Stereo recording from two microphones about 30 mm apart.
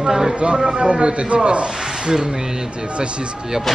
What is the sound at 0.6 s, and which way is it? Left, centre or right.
A man's voice, right.